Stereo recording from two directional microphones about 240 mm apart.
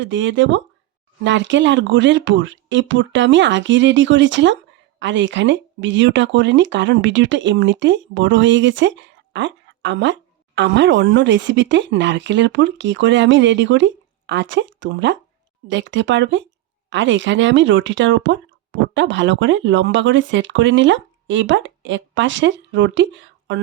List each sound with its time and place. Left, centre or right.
0.0 s speech: right